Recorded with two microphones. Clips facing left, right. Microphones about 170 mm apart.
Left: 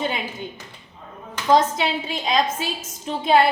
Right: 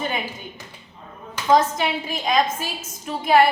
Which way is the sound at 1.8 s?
25° left (ahead or behind).